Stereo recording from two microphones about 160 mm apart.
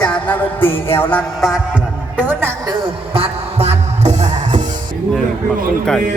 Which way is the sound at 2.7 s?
30° right (ahead or behind).